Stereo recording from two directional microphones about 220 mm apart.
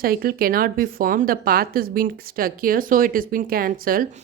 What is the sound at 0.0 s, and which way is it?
A woman's voice, 40° right (ahead or behind).